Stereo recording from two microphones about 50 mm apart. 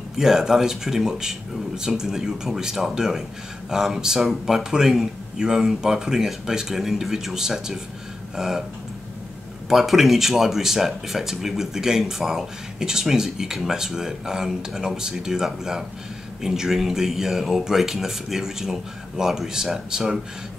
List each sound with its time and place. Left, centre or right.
0.2 s speech: centre
9.7 s speech: centre